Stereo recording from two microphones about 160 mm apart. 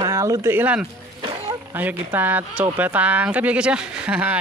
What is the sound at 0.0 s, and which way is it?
Speech, 20° right (ahead or behind).